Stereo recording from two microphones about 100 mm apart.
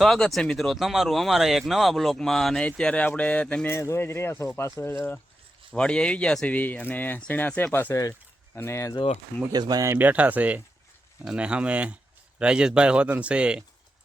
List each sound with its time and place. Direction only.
0.0 s speech: centre (ahead or behind)
3.7 s speech: 25° left (ahead or behind)
5.7 s speech: 10° left (ahead or behind); by 9.0 s 30° left (ahead or behind)
9.5 s speech: 40° right (ahead or behind)
9.9 s a man's voice: 15° right (ahead or behind)